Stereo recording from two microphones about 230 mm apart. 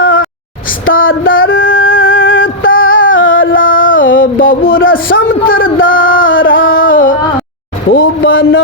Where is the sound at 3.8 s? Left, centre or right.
Left.